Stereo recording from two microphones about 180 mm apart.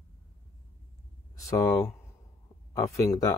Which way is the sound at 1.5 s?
15° left (ahead or behind).